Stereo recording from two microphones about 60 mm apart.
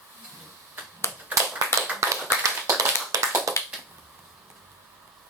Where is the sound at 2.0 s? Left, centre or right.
Right.